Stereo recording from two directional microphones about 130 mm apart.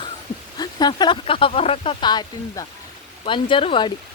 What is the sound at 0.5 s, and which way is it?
Speech, 30° left (ahead or behind).